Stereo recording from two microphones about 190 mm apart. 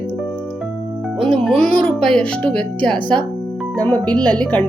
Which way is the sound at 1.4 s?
5° left (ahead or behind).